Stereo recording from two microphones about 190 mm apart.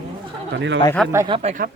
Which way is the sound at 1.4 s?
35° right (ahead or behind).